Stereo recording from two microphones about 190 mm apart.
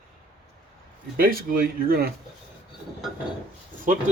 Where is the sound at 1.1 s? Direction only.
50° right (ahead or behind).